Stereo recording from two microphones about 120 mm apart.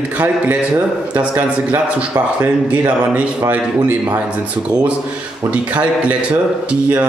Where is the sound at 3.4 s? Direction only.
15° right (ahead or behind).